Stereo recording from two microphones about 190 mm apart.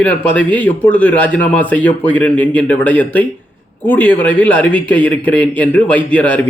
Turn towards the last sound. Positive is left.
turn(degrees=5)  # may be behind; listen again after turning